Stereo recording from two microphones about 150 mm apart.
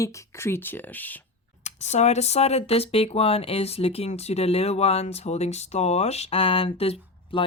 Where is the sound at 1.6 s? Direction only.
50° left (ahead or behind).